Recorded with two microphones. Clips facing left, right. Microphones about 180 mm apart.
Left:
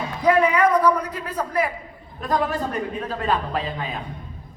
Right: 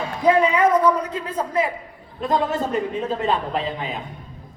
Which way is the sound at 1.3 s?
25° right (ahead or behind).